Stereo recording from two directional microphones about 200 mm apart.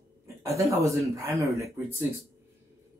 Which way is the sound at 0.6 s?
15° right (ahead or behind).